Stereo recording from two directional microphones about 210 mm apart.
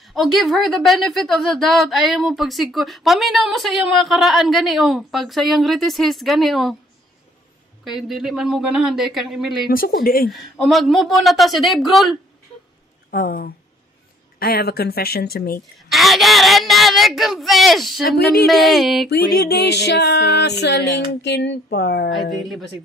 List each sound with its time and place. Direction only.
0.0 s a woman's voice: centre (ahead or behind)
7.8 s a woman's voice: centre (ahead or behind)
9.7 s music: 45° left (ahead or behind)
10.3 s a woman's voice: centre (ahead or behind)
13.1 s music: 45° left (ahead or behind)
15.9 s a woman's voice: centre (ahead or behind)
18.0 s music: 50° left (ahead or behind)
18.4 s a woman's voice: centre (ahead or behind)
19.0 s music: 50° left (ahead or behind)
22.1 s a woman's voice: centre (ahead or behind)